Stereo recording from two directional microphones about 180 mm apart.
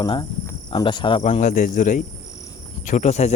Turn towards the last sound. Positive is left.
turn(degrees=40)  # may be behind; listen again after turning